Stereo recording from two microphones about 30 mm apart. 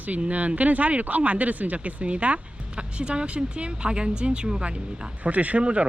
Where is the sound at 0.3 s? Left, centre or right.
Right.